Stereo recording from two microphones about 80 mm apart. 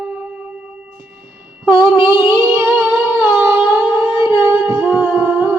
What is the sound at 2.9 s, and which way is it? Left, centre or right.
Music, right.